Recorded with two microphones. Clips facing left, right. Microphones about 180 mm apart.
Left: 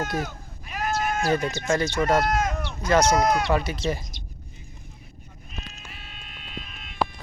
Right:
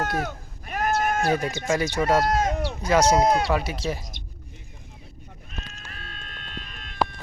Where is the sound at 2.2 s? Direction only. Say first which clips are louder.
Right 2 dB; 35° right (ahead or behind).